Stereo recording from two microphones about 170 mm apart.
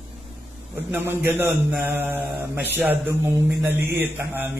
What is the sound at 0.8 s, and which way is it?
A man's voice, 15° right (ahead or behind).